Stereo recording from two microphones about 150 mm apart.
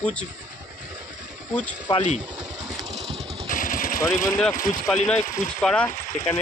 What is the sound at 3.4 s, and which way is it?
Vehicle, 65° left (ahead or behind).